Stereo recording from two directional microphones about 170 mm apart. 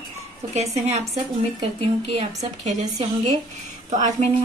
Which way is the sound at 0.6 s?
40° right (ahead or behind).